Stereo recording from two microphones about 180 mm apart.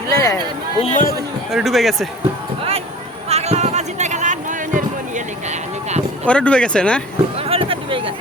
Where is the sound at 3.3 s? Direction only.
35° right (ahead or behind).